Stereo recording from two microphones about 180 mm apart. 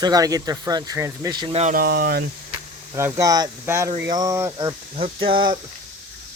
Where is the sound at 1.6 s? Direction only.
55° right (ahead or behind).